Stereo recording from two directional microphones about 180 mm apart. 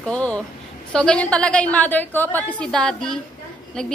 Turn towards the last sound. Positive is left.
turn(degrees=5)  # may be behind; listen again after turning